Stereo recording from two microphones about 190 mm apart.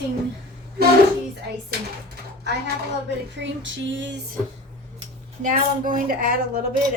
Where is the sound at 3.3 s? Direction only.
75° right (ahead or behind).